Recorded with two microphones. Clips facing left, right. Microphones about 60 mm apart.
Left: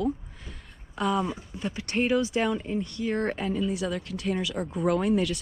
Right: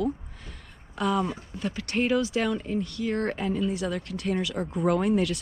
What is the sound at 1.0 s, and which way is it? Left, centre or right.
Speech, centre.